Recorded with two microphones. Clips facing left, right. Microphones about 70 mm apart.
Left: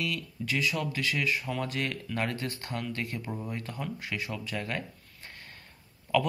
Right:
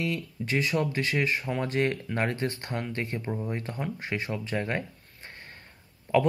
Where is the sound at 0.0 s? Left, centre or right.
Right.